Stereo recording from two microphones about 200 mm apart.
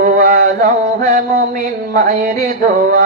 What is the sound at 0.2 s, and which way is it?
Mantra, 45° right (ahead or behind).